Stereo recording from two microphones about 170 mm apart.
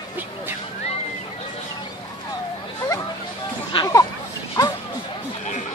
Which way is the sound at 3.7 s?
25° left (ahead or behind).